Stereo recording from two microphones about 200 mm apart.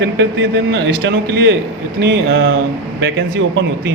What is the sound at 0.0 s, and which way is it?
Speech, 60° right (ahead or behind).